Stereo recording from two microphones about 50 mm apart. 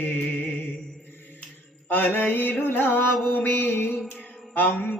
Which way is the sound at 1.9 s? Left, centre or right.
Left.